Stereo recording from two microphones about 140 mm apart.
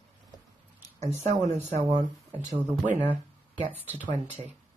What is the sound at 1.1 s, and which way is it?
Speech, 55° right (ahead or behind).